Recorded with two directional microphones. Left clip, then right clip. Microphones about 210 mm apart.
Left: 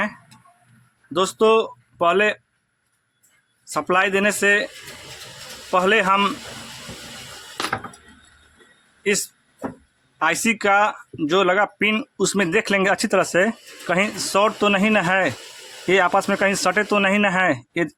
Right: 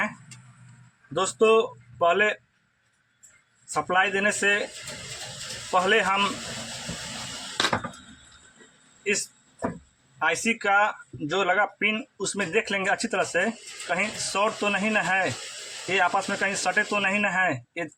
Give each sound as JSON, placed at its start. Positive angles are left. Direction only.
{"t": 1.1, "sound": "speech", "side_deg": 55}
{"t": 3.8, "sound": "speech", "side_deg": 55}
{"t": 5.7, "sound": "speech", "side_deg": 60}
{"t": 10.2, "sound": "speech", "side_deg": 60}